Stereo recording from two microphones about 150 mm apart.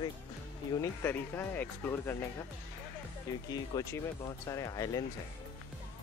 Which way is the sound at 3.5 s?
25° left (ahead or behind).